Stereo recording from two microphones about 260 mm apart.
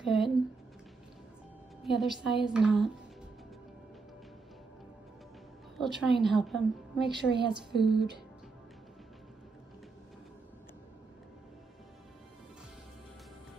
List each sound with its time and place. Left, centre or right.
0.0 s a sound: centre
1.9 s a woman's voice: centre
5.8 s a woman's voice: centre